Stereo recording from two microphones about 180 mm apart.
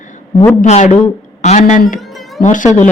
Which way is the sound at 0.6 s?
40° left (ahead or behind).